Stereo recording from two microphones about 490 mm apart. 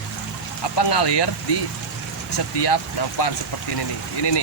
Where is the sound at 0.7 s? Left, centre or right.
Left.